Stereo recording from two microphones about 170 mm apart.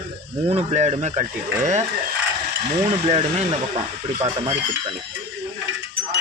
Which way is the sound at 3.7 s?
30° right (ahead or behind).